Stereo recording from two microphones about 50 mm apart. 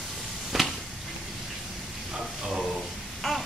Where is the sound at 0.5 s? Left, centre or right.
Centre.